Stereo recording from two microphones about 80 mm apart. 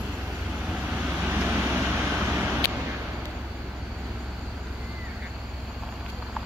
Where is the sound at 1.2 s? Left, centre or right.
Right.